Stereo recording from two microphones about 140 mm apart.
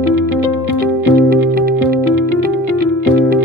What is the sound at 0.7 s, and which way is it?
Music, 90° right.